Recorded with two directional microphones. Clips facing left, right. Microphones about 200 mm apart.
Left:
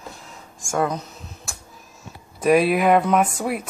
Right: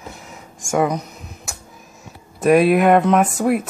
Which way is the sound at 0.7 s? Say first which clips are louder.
Right 4 dB; 15° right (ahead or behind).